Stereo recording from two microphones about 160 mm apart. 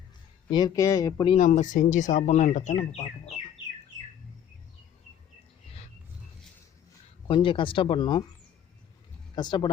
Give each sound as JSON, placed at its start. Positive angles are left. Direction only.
{"t": 0.5, "sound": "speech", "side_deg": 20}
{"t": 1.4, "sound": "speech", "side_deg": 50}
{"t": 7.3, "sound": "speech", "side_deg": 30}
{"t": 9.3, "sound": "speech", "side_deg": 30}